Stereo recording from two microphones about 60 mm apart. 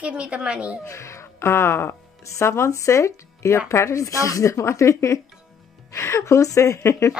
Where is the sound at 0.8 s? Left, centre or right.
Left.